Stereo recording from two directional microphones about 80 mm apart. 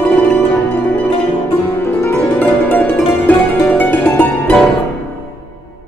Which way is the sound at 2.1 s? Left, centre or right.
Left.